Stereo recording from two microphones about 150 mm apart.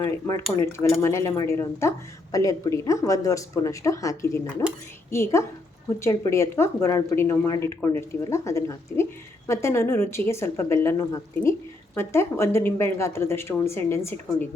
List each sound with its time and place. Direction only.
0.0 s a woman's voice: 25° left (ahead or behind)